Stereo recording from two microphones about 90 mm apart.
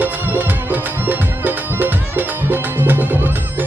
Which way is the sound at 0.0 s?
20° right (ahead or behind).